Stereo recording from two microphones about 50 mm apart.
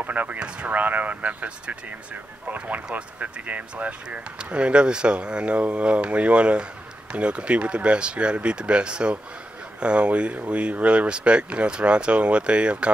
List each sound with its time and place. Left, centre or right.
0.0 s speech: right